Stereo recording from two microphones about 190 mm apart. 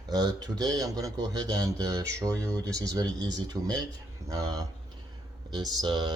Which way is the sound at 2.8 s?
20° right (ahead or behind).